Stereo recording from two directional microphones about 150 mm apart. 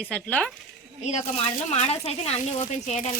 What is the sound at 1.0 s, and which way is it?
Speech, 50° left (ahead or behind).